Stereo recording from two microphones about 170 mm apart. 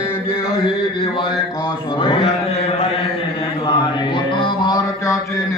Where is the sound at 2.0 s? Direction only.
30° left (ahead or behind).